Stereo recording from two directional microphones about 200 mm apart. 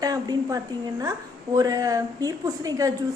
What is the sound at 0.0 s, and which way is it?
A woman's voice, 20° right (ahead or behind).